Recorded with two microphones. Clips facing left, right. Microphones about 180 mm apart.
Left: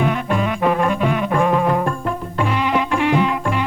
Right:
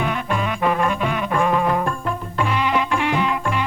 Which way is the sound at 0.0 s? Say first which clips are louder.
Left 4 dB; 35° left (ahead or behind).